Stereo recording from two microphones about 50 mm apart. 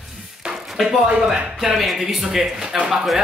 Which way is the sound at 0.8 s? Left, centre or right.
Centre.